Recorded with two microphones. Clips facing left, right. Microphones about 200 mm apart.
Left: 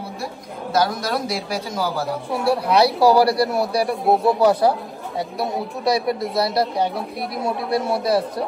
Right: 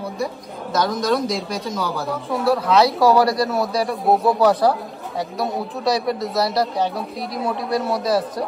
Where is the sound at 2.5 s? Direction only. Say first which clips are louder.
Even; 30° left (ahead or behind).